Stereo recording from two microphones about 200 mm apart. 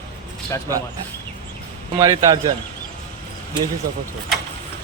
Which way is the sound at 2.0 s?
15° right (ahead or behind).